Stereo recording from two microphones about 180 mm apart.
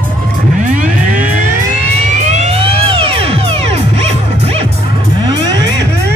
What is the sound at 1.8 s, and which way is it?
Music, 40° right (ahead or behind).